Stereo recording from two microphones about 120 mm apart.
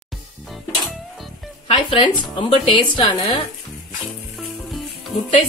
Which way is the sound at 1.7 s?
40° left (ahead or behind).